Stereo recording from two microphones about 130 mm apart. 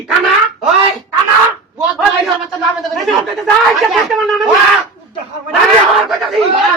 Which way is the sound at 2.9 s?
Centre (ahead or behind).